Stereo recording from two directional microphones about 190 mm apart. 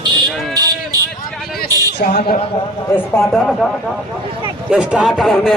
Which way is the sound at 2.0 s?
60° left (ahead or behind).